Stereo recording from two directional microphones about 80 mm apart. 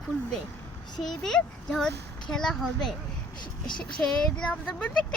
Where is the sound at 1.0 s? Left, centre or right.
Centre.